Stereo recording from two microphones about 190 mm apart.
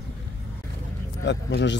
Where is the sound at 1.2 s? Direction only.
65° left (ahead or behind).